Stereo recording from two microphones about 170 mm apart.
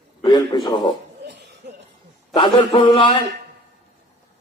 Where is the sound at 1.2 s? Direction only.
90° right.